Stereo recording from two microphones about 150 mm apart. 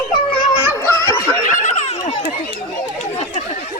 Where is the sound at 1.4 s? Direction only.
55° left (ahead or behind).